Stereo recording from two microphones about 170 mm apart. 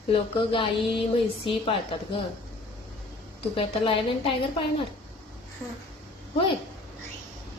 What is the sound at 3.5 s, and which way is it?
Speech, 30° left (ahead or behind).